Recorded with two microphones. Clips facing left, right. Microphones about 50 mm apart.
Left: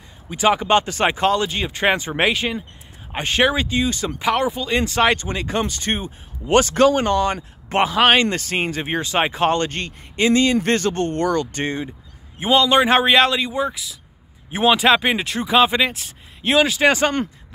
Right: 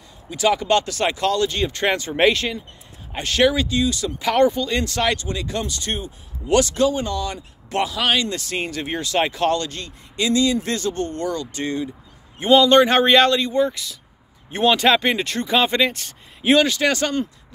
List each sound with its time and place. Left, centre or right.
0.3 s speech: left
2.1 s speech: centre
3.1 s speech: left
4.3 s speech: centre
4.6 s speech: left
6.8 s speech: left
9.7 s speech: left
12.5 s speech: centre
16.8 s speech: left